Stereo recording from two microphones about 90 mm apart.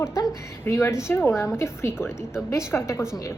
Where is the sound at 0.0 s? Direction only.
30° left (ahead or behind).